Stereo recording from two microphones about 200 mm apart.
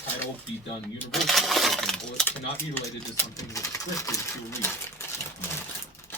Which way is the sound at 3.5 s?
15° left (ahead or behind).